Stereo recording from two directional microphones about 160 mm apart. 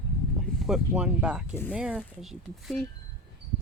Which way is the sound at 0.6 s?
5° right (ahead or behind).